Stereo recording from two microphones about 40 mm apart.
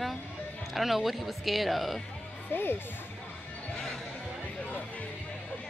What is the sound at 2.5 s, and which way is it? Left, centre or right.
Speech, left.